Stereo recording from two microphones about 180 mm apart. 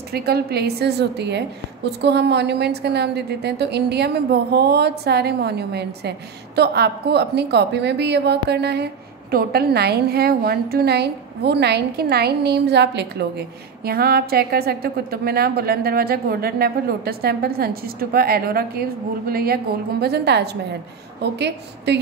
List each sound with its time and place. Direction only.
0.1 s a woman's voice: 60° right (ahead or behind)